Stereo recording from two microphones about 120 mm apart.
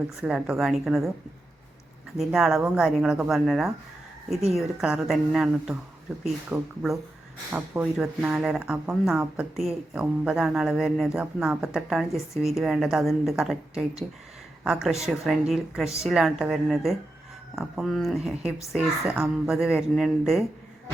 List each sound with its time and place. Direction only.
0.2 s speech: 5° right (ahead or behind)
2.1 s speech: 5° right (ahead or behind)
6.5 s speech: 10° right (ahead or behind)